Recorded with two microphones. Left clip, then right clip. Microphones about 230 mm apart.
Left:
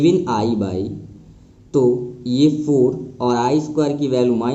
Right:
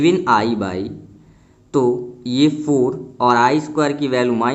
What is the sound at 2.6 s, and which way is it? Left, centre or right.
Speech, right.